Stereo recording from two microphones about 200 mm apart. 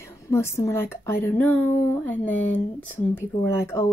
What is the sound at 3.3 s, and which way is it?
Speech, 20° left (ahead or behind).